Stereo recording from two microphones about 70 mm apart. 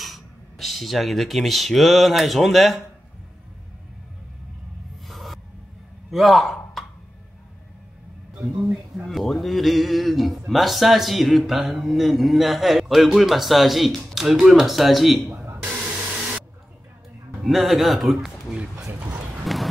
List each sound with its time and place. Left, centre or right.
0.0 s speech: centre
5.0 s a sound: centre
9.0 s a man's voice: centre
15.7 s hair dryer: right
17.4 s a man's voice: centre
19.4 s a sound: centre